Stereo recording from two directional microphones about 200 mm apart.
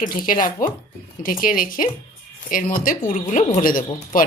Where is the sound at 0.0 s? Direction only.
45° left (ahead or behind).